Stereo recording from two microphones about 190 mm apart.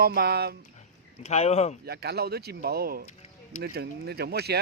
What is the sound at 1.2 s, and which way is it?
Speech, 35° left (ahead or behind).